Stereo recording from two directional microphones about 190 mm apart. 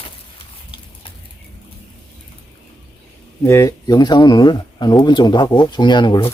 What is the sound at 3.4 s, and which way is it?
Speech, 15° left (ahead or behind).